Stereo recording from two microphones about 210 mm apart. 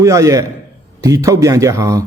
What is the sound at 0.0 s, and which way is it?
A man's voice, 15° right (ahead or behind).